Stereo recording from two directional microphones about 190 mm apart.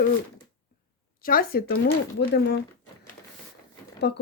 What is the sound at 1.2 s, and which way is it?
Speech, 50° left (ahead or behind).